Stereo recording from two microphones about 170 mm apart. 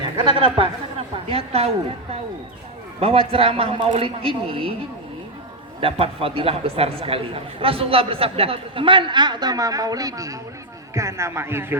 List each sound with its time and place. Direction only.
0.3 s a woman's voice: 30° right (ahead or behind)
3.0 s a man's voice: 35° right (ahead or behind)
5.8 s a man's voice: 35° right (ahead or behind); by 11.8 s 15° right (ahead or behind)